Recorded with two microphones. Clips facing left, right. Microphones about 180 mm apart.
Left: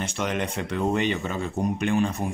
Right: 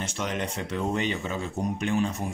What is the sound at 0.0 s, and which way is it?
Speech, 60° left (ahead or behind).